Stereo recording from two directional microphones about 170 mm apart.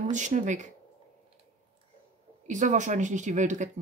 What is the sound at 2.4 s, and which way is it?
Speech, 45° right (ahead or behind).